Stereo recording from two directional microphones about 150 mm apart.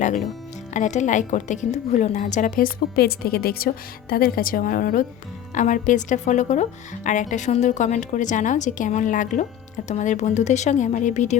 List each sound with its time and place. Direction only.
0.7 s speech: 50° left (ahead or behind); by 5.0 s 70° left (ahead or behind)
5.5 s speech: 55° left (ahead or behind)